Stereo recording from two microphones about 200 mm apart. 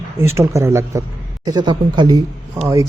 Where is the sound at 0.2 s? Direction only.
15° right (ahead or behind).